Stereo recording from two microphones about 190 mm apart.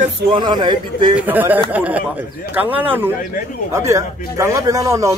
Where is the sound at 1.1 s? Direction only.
10° right (ahead or behind).